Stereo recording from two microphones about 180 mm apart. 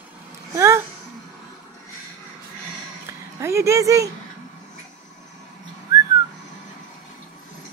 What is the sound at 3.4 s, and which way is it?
Speech, 15° right (ahead or behind).